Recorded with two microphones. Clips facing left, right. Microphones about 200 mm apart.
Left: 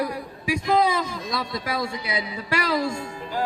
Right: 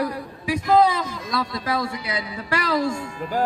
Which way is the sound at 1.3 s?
20° left (ahead or behind).